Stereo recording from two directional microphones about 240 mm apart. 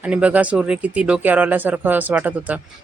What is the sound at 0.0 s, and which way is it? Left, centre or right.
Speech, centre.